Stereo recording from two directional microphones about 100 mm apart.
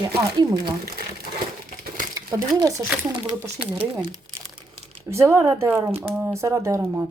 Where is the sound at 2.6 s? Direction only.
40° right (ahead or behind).